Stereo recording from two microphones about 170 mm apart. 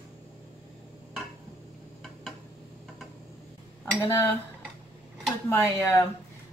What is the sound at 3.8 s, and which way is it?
Cutlery, 15° left (ahead or behind).